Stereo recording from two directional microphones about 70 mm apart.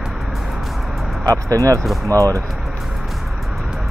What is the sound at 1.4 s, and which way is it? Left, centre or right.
Speech, right.